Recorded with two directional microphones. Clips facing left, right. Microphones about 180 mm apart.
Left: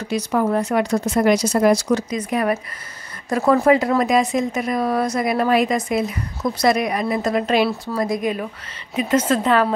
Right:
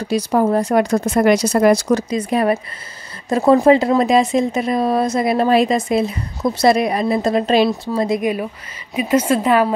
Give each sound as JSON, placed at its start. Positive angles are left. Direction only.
{"t": 0.0, "sound": "speech", "side_deg": -35}
{"t": 0.8, "sound": "speech", "side_deg": -50}
{"t": 2.0, "sound": "speech", "side_deg": -30}
{"t": 8.9, "sound": "a woman's voice", "side_deg": -10}